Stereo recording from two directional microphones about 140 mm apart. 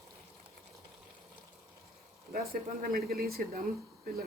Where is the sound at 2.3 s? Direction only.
90° right.